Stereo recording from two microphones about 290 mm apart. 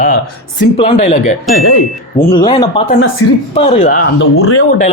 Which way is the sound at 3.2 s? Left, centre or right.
Left.